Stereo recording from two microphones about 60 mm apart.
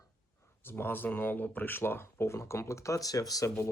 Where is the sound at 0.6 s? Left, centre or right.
Left.